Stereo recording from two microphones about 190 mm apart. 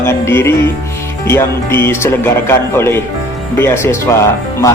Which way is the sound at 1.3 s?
10° left (ahead or behind).